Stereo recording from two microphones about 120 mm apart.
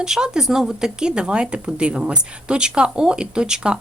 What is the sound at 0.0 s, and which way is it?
Speech, 5° right (ahead or behind).